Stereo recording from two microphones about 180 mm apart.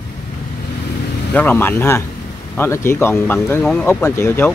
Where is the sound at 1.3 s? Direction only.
10° left (ahead or behind).